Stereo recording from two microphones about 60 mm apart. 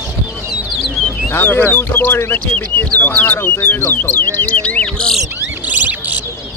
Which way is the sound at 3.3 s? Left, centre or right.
Left.